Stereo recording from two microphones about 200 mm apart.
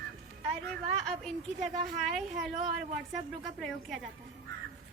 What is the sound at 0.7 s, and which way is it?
A woman's voice, centre (ahead or behind).